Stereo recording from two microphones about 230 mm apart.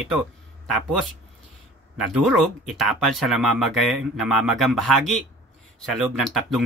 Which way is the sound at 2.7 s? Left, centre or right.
Centre.